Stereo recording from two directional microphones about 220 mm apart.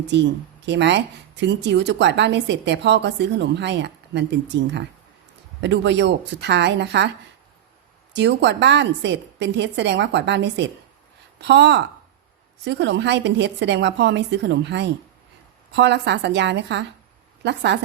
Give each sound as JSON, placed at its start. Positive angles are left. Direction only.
{"t": 0.1, "sound": "speech", "side_deg": -55}
{"t": 8.1, "sound": "speech", "side_deg": -50}